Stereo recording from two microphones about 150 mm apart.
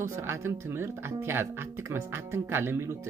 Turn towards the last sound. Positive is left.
turn(degrees=-15)  # may be behind; listen again after turning